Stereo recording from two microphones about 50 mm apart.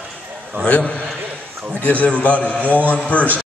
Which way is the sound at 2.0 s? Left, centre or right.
Left.